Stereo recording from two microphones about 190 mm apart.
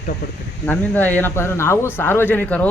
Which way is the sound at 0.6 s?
10° left (ahead or behind).